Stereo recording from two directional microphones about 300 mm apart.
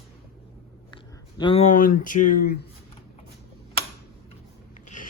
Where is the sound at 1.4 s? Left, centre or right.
Centre.